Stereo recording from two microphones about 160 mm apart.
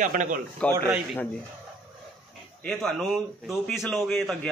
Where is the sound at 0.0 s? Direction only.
55° right (ahead or behind).